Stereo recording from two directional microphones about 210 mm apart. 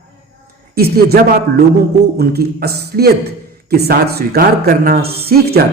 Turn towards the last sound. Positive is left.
turn(degrees=-45)  # may be behind; listen again after turning